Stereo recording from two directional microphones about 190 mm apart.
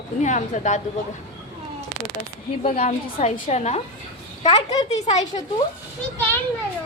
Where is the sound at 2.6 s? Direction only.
35° left (ahead or behind).